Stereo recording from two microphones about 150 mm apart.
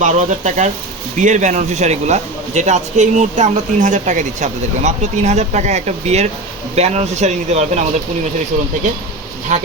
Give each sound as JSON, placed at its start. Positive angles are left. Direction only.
{"t": 0.0, "sound": "a man's voice", "side_deg": -55}
{"t": 9.5, "sound": "speech", "side_deg": -55}